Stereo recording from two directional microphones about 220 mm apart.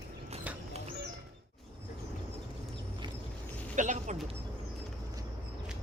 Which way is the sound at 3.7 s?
35° right (ahead or behind).